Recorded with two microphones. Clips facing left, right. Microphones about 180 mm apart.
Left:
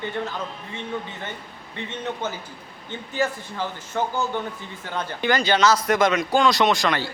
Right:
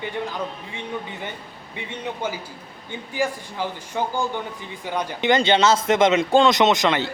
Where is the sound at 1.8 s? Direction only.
10° right (ahead or behind).